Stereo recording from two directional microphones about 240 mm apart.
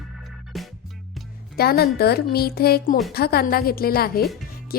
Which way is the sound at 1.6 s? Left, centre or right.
Left.